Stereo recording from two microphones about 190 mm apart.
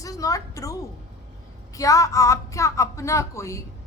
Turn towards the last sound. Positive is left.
turn(degrees=15)  # may be behind; listen again after turning